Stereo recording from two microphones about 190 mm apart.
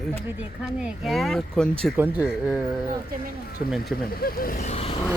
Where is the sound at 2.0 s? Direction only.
10° right (ahead or behind).